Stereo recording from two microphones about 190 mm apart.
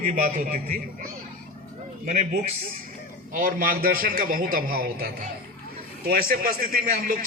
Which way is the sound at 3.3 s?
50° right (ahead or behind).